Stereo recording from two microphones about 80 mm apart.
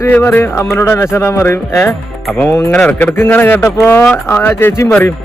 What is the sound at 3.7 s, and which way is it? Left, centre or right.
Speech, left.